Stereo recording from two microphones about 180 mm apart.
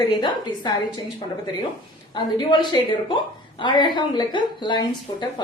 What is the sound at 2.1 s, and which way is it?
A woman's voice, 25° left (ahead or behind).